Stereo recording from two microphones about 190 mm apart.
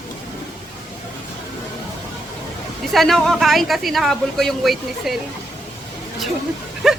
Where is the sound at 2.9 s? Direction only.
Centre (ahead or behind).